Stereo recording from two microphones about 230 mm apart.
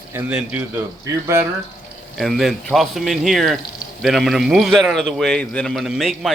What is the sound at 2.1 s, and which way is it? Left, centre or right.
A man's voice, centre.